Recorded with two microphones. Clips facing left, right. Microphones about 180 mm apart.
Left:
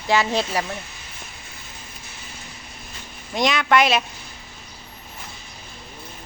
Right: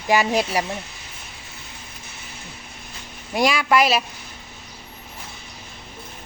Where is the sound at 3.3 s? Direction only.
5° right (ahead or behind).